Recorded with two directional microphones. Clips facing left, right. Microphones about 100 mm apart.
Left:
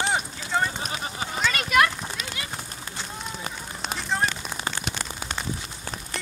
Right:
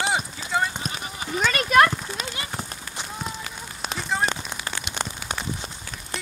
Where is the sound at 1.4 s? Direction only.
40° right (ahead or behind).